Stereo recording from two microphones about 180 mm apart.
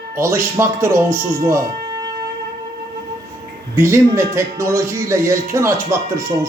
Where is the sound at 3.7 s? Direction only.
15° right (ahead or behind).